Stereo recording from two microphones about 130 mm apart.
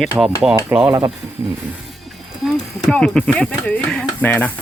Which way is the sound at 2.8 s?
5° left (ahead or behind).